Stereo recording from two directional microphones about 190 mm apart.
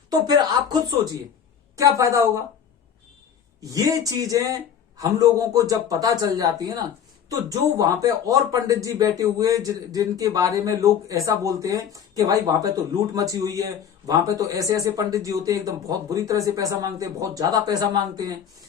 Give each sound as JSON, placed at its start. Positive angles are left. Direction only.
{"t": 0.1, "sound": "speech", "side_deg": -20}
{"t": 3.6, "sound": "speech", "side_deg": -20}